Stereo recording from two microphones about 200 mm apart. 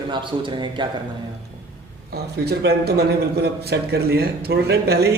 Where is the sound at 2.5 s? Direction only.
50° right (ahead or behind).